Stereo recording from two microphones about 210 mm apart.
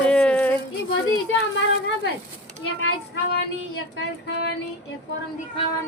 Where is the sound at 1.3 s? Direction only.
60° left (ahead or behind).